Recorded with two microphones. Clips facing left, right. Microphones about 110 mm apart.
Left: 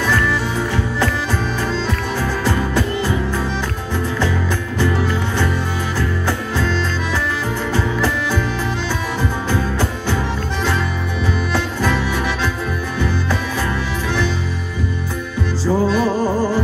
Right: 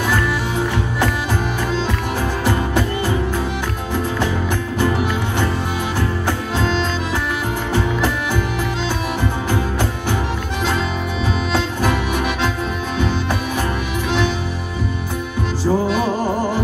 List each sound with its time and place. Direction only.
5.9 s music: 15° right (ahead or behind)
11.5 s music: 15° right (ahead or behind)
15.6 s music: 15° right (ahead or behind)